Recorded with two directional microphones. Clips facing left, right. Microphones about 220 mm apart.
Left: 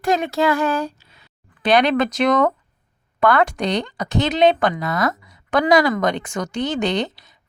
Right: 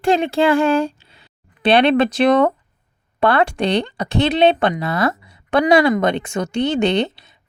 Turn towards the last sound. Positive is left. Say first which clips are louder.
# right 4 dB
turn(degrees=-25)  # may be behind; listen again after turning